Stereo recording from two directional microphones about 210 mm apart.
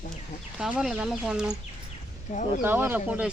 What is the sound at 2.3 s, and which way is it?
Speech, 35° left (ahead or behind).